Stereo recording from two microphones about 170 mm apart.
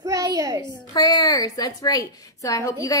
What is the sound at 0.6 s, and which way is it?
A woman's voice, 25° left (ahead or behind).